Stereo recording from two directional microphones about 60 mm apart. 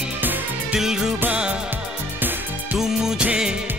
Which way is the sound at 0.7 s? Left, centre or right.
Centre.